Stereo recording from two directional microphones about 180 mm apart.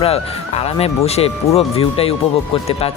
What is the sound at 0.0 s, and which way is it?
Speech, 35° left (ahead or behind).